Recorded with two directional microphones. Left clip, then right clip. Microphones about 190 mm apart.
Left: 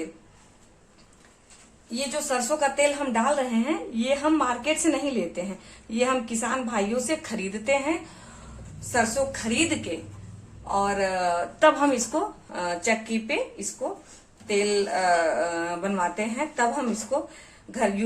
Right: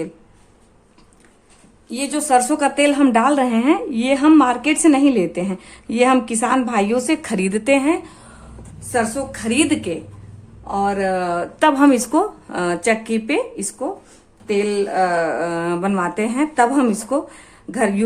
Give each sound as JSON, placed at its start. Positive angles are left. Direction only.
{"t": 1.9, "sound": "a woman's voice", "side_deg": -60}
{"t": 14.4, "sound": "a woman's voice", "side_deg": -45}